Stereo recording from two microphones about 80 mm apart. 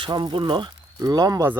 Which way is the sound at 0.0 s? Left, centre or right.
Right.